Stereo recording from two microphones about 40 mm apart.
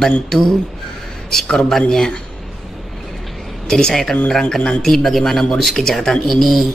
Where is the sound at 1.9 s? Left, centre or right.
Centre.